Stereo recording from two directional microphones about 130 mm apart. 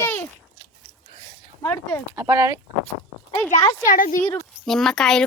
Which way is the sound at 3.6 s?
15° left (ahead or behind).